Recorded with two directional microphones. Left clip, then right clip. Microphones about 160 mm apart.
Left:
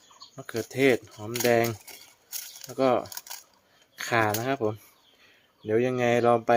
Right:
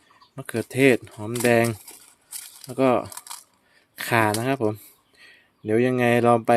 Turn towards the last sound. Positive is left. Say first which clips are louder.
# right 3 dB
turn(degrees=-60)  # may be behind; listen again after turning